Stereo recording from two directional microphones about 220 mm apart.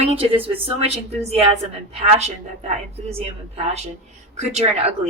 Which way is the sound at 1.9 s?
30° right (ahead or behind).